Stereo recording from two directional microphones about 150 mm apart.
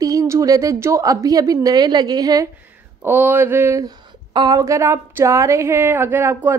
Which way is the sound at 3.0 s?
15° right (ahead or behind).